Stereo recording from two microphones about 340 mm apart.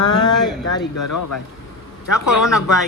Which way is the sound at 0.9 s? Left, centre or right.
Left.